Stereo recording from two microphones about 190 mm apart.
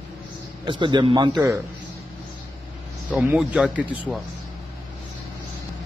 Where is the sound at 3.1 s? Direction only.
5° right (ahead or behind).